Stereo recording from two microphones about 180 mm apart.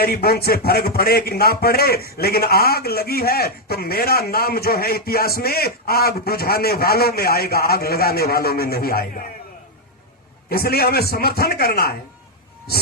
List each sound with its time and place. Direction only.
0.0 s speech: 60° left (ahead or behind)
10.5 s speech: 60° left (ahead or behind)